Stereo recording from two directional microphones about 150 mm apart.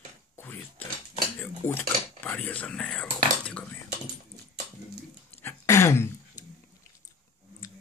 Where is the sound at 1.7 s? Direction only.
10° left (ahead or behind).